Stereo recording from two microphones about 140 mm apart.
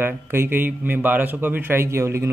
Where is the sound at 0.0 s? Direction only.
15° right (ahead or behind).